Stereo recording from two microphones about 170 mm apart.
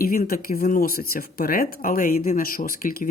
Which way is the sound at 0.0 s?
60° left (ahead or behind).